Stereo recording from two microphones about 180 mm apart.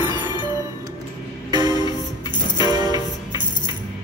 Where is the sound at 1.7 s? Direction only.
25° left (ahead or behind).